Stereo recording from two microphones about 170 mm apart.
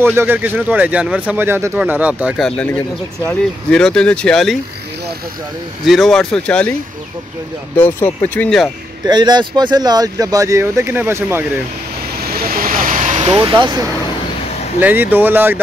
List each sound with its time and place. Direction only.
0.0 s speech: 15° right (ahead or behind)
2.4 s speech: 5° left (ahead or behind)
5.9 s speech: centre (ahead or behind)
7.7 s speech: 10° left (ahead or behind)
9.0 s speech: 25° right (ahead or behind)
12.2 s vehicle: 65° right (ahead or behind)
12.8 s vehicle: 50° right (ahead or behind)
13.3 s speech: 25° right (ahead or behind)
14.8 s speech: 10° right (ahead or behind)